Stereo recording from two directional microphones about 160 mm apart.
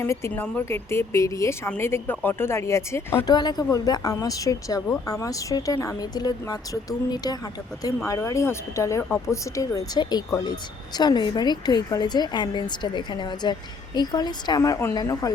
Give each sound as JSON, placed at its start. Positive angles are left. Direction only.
{"t": 0.0, "sound": "speech", "side_deg": 15}
{"t": 8.0, "sound": "speech", "side_deg": 20}